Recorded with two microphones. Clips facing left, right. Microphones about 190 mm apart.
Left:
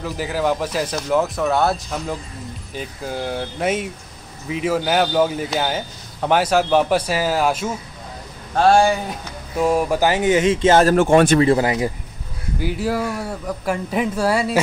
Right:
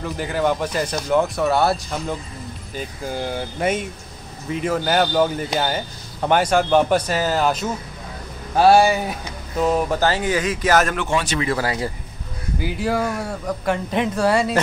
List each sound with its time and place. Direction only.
0.0 s a man's voice: 5° left (ahead or behind)
8.5 s speech: 5° right (ahead or behind)
9.6 s speech: 10° left (ahead or behind); by 11.0 s 30° left (ahead or behind)
11.0 s speech: 50° left (ahead or behind)
11.3 s speech: 25° left (ahead or behind)
12.5 s a man's voice: centre (ahead or behind)